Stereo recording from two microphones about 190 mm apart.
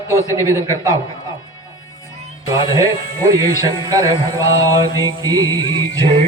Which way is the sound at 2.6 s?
15° right (ahead or behind).